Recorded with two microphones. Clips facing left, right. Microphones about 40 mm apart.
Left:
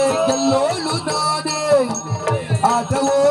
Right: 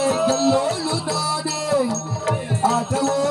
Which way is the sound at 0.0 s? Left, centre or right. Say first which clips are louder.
Left 2 dB; left.